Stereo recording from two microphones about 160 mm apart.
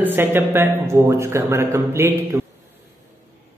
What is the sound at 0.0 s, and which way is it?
A man's voice, 15° right (ahead or behind).